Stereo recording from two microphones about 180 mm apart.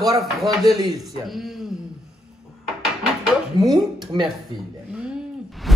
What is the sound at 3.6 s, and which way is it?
Speech, 20° right (ahead or behind).